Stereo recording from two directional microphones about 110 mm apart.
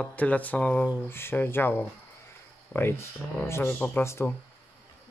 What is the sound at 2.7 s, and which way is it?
Speech, 10° right (ahead or behind).